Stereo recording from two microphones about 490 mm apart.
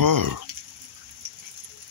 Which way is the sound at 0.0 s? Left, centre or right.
Right.